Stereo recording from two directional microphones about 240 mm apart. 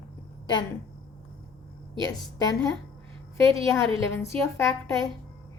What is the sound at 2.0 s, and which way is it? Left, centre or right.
Speech, centre.